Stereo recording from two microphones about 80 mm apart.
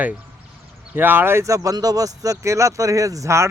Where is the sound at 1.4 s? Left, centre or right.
Right.